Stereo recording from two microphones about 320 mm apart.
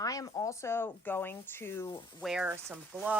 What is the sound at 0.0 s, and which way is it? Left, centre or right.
Speech, centre.